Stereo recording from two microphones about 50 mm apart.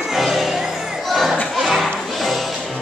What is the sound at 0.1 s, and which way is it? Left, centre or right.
Music, centre.